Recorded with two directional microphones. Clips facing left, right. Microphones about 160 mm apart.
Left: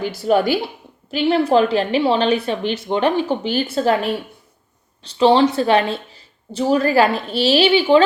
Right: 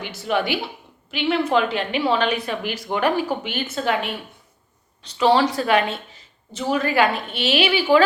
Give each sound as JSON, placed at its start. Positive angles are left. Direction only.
{"t": 0.0, "sound": "a woman's voice", "side_deg": 35}